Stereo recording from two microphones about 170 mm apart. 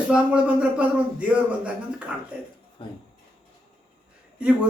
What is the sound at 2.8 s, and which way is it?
Speech, 30° left (ahead or behind).